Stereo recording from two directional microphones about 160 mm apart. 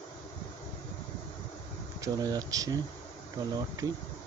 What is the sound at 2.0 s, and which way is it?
Speech, 25° right (ahead or behind).